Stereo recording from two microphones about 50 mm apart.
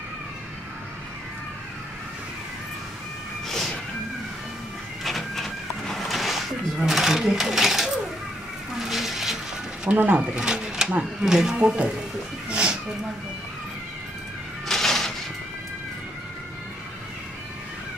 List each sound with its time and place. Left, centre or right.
3.4 s cat: centre
5.0 s a sound: centre
9.8 s speech: right
10.3 s pigeon: centre
11.2 s speech: centre
11.5 s speech: right
12.4 s cat: right
14.7 s music: centre